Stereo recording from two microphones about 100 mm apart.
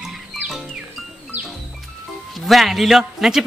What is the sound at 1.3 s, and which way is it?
Music, 90° right.